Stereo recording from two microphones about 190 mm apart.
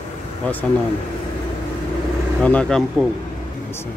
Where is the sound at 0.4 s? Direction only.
5° left (ahead or behind).